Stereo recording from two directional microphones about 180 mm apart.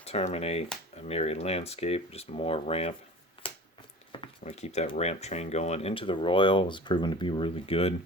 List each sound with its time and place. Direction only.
0.0 s speech: 35° left (ahead or behind)
3.4 s a sound: 30° left (ahead or behind)
4.1 s speech: 30° left (ahead or behind)